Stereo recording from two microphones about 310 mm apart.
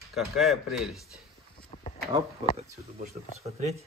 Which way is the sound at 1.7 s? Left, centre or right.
Left.